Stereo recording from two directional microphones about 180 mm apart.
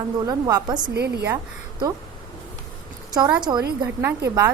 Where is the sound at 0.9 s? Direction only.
65° right (ahead or behind).